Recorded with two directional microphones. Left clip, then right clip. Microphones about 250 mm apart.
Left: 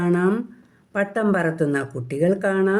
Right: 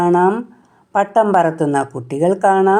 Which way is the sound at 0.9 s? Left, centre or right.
Right.